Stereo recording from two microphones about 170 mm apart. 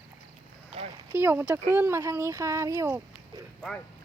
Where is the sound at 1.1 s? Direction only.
15° right (ahead or behind).